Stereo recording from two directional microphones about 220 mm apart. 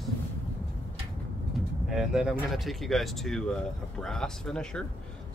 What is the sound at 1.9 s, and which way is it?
Speech, centre (ahead or behind).